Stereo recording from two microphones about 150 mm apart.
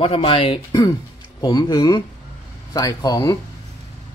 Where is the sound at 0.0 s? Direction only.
40° left (ahead or behind).